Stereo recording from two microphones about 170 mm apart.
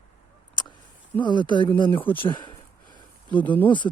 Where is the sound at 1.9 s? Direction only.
10° left (ahead or behind).